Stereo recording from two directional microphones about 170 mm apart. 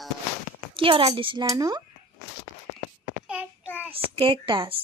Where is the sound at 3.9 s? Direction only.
30° right (ahead or behind).